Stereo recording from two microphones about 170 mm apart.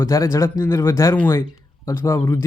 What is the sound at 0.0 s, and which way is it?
Speech, 20° left (ahead or behind).